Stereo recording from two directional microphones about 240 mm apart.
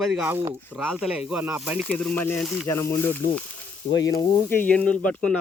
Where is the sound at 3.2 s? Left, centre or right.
Left.